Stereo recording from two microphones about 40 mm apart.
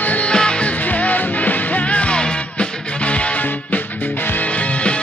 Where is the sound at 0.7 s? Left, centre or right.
Left.